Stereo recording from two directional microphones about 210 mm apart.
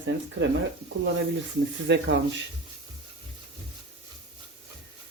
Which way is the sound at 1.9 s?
60° right (ahead or behind).